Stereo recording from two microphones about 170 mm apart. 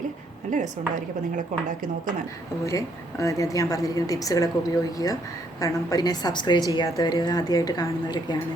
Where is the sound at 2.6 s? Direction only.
20° left (ahead or behind).